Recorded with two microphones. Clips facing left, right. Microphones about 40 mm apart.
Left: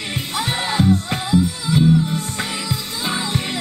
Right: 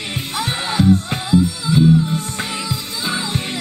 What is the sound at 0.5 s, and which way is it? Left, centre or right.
Music, left.